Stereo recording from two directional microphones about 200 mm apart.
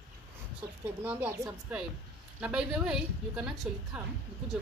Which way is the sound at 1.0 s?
5° right (ahead or behind).